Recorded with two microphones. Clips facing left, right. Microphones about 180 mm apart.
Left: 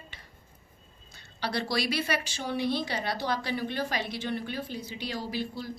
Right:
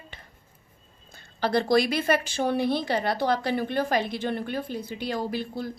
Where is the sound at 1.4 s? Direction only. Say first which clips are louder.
Right 8 dB; 50° right (ahead or behind).